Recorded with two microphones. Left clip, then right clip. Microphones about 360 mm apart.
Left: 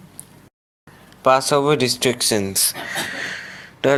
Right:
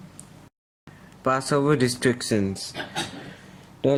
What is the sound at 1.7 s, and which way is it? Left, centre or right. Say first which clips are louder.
Speech: left 4 dB; centre.